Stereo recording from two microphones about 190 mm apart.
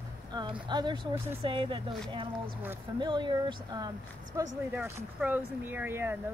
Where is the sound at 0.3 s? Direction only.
25° right (ahead or behind).